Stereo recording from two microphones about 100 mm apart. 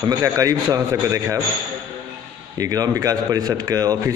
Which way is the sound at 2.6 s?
40° right (ahead or behind).